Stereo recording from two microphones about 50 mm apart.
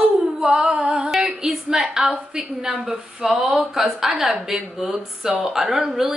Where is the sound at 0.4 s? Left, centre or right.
Centre.